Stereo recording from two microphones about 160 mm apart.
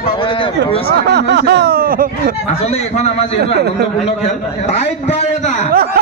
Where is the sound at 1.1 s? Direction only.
90° right; by 2.0 s 70° right (ahead or behind).